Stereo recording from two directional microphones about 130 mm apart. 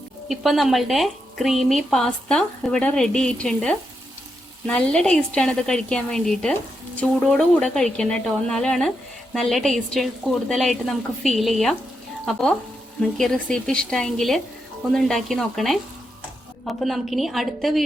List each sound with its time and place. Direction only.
0.3 s a woman's voice: centre (ahead or behind)
16.8 s speech: centre (ahead or behind)